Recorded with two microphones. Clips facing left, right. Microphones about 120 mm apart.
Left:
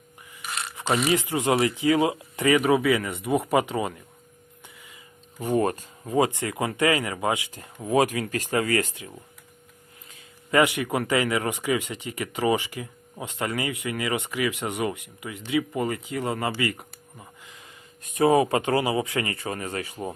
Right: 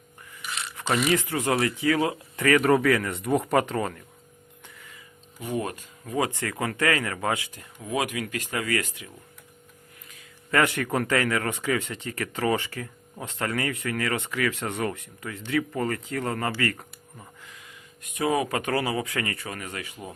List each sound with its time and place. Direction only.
0.4 s a sound: 45° left (ahead or behind)
1.1 s speech: 15° left (ahead or behind)
2.6 s speech: 5° left (ahead or behind)
4.6 s music: 15° left (ahead or behind)
5.4 s speech: 45° left (ahead or behind)
6.1 s speech: 25° left (ahead or behind)
7.5 s speech: 30° left (ahead or behind)
10.5 s speech: 15° left (ahead or behind)
18.0 s speech: 35° left (ahead or behind)